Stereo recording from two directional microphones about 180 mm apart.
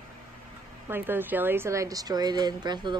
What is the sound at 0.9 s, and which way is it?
A woman's voice, 10° right (ahead or behind).